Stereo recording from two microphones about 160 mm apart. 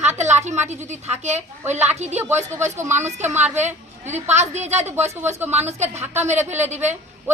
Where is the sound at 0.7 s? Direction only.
45° right (ahead or behind).